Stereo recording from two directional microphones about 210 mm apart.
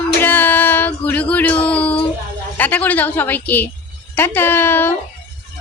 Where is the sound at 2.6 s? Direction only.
10° left (ahead or behind).